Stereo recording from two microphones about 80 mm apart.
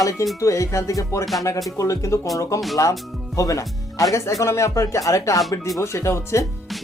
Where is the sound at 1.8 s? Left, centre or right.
Left.